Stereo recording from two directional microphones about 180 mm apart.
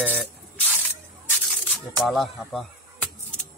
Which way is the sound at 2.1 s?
Centre (ahead or behind).